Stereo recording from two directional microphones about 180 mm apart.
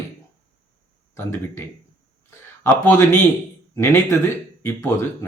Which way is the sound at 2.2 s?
15° left (ahead or behind).